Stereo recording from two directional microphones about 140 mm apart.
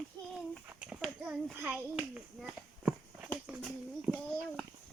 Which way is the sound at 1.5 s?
10° right (ahead or behind).